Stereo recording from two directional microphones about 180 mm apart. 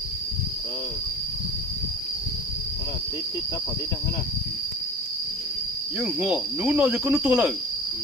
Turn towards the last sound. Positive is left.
turn(degrees=-5)  # may be behind; listen again after turning